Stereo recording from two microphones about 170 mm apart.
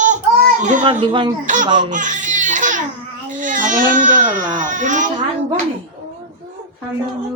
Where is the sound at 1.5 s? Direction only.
50° right (ahead or behind).